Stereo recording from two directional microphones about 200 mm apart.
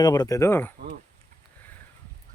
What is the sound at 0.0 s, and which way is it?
Speech, 20° left (ahead or behind).